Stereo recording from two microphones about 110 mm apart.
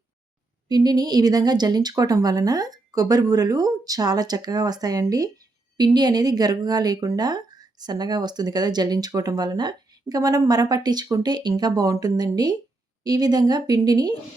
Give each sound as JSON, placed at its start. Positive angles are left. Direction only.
{"t": 0.7, "sound": "a woman's voice", "side_deg": -35}